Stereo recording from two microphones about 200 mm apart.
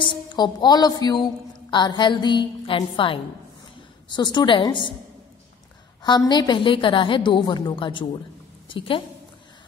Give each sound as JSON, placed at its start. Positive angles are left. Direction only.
{"t": 0.0, "sound": "a woman's voice", "side_deg": 25}
{"t": 6.0, "sound": "a woman's voice", "side_deg": 20}